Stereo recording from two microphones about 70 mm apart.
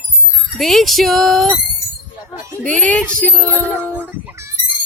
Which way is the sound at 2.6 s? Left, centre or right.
Centre.